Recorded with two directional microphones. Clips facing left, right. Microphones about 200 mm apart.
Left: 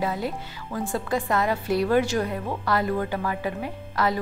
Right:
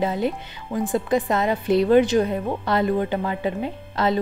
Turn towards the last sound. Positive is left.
turn(degrees=-25)  # may be behind; listen again after turning